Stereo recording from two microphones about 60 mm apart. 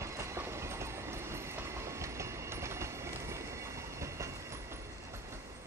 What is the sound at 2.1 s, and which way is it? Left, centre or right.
Train, right.